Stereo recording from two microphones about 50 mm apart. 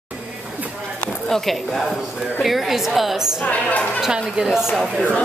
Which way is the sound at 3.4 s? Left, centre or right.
Left.